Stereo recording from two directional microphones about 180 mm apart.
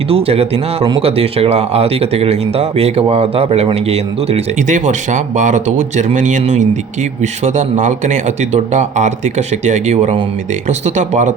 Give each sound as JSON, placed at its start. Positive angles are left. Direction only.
{"t": 0.1, "sound": "speech", "side_deg": -35}